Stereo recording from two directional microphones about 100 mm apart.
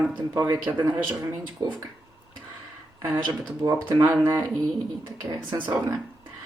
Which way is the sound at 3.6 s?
25° right (ahead or behind).